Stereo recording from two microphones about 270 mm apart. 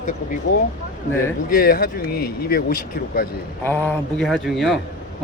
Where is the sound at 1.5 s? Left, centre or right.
Left.